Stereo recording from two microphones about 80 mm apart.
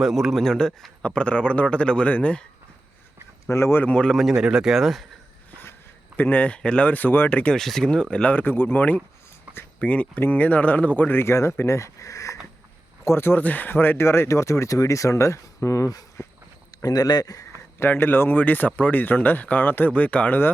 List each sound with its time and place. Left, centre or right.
0.0 s a man's voice: centre
3.5 s speech: left
3.8 s speech: centre
6.1 s speech: left
7.5 s a man's voice: centre; by 9.0 s left
9.5 s a sound: centre
9.8 s speech: centre; by 12.4 s left
13.1 s speech: left
16.8 s speech: left
17.7 s speech: left